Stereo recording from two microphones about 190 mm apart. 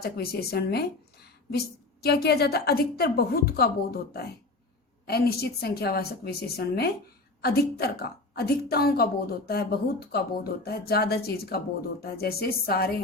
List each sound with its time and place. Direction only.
0.0 s a woman's voice: 55° left (ahead or behind)